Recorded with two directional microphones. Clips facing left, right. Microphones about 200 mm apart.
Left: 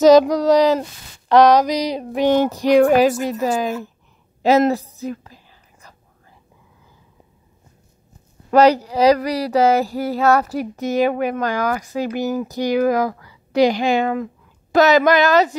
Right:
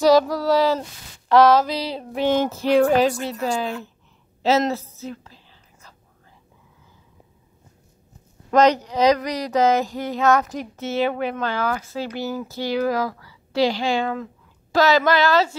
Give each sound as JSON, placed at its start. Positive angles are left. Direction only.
{"t": 0.0, "sound": "a sound", "side_deg": 20}
{"t": 1.3, "sound": "female singing", "side_deg": 20}
{"t": 4.7, "sound": "female singing", "side_deg": 15}
{"t": 5.2, "sound": "whispering", "side_deg": 15}
{"t": 8.5, "sound": "female singing", "side_deg": 10}
{"t": 10.1, "sound": "a woman's voice", "side_deg": 35}
{"t": 10.5, "sound": "female singing", "side_deg": 10}
{"t": 11.1, "sound": "speech", "side_deg": 45}
{"t": 11.3, "sound": "female singing", "side_deg": 15}
{"t": 12.9, "sound": "speech", "side_deg": 15}